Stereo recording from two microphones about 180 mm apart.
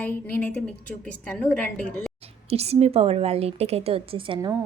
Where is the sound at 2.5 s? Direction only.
35° right (ahead or behind).